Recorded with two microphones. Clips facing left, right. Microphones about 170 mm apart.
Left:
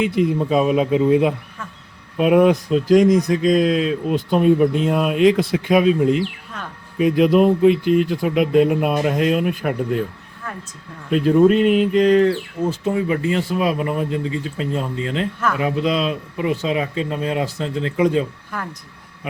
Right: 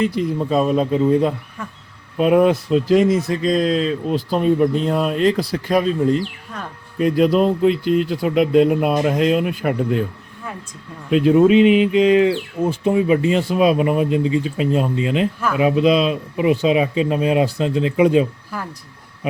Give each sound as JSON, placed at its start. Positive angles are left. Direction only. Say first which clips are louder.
{"t": 0.2, "sound": "speech", "louder": "left 1 dB", "side_deg": 5}
{"t": 11.1, "sound": "speech", "louder": "right 1 dB", "side_deg": -5}